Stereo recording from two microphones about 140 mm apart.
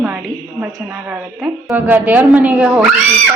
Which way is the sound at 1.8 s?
10° right (ahead or behind).